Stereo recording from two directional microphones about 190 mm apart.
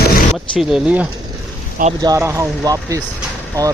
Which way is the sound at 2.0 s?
15° right (ahead or behind).